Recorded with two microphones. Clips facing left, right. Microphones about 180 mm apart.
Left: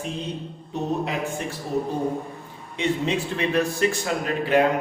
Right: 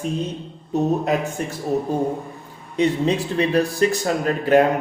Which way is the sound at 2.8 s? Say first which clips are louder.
Right 5 dB; 35° right (ahead or behind).